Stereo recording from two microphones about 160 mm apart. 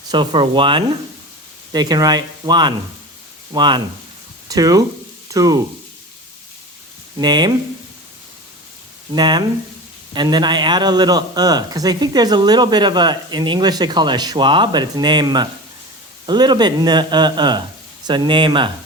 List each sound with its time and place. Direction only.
0.1 s speech: 30° right (ahead or behind)
7.2 s speech: 25° right (ahead or behind)
9.1 s speech: 25° right (ahead or behind)